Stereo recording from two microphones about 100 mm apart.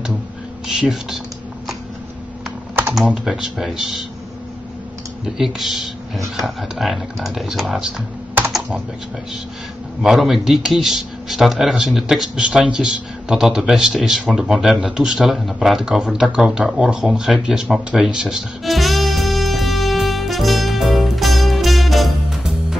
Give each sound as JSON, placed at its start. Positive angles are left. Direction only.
{"t": 0.7, "sound": "speech", "side_deg": -5}
{"t": 3.3, "sound": "speech", "side_deg": -5}
{"t": 5.2, "sound": "speech", "side_deg": 0}
{"t": 10.0, "sound": "a man's voice", "side_deg": -5}